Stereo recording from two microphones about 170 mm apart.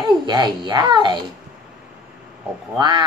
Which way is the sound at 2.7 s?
25° right (ahead or behind).